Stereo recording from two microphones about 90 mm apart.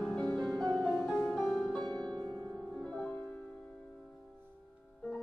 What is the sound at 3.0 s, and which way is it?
Music, 20° left (ahead or behind).